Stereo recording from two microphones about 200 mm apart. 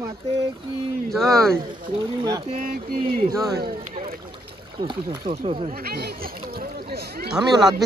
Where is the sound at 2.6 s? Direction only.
45° right (ahead or behind).